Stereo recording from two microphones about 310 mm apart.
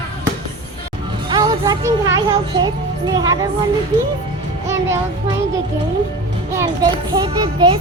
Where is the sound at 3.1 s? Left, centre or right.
Centre.